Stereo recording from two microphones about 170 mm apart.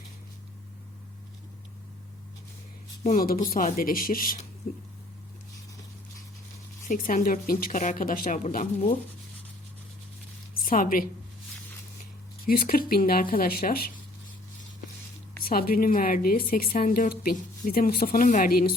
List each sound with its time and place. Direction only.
3.0 s a woman's voice: 50° left (ahead or behind)
6.8 s a woman's voice: 55° left (ahead or behind)
10.5 s a woman's voice: 55° left (ahead or behind)
12.5 s a woman's voice: 60° left (ahead or behind)
15.4 s a woman's voice: 60° left (ahead or behind)